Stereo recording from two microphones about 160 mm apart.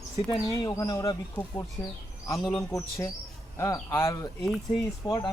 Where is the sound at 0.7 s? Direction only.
20° left (ahead or behind).